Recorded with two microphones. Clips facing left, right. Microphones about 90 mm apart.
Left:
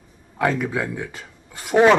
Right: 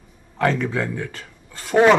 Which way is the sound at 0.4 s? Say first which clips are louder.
Right 1 dB; 10° left (ahead or behind).